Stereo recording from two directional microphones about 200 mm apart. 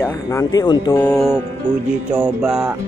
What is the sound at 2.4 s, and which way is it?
Speech, 5° right (ahead or behind).